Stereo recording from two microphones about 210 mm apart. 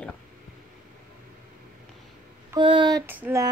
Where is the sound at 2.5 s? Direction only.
20° right (ahead or behind).